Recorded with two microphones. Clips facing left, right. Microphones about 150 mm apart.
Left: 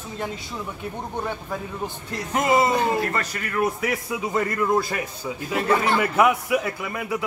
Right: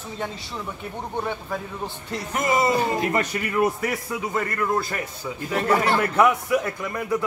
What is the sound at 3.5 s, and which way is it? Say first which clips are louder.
Speech: right 1 dB; centre (ahead or behind).